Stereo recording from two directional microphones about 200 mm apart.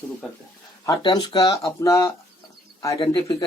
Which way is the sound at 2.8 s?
25° left (ahead or behind).